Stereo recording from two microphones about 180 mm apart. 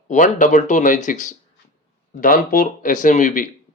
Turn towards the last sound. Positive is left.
turn(degrees=45)  # may be behind; listen again after turning